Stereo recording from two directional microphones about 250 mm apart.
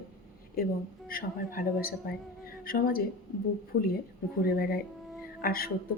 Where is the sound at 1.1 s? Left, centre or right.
Left.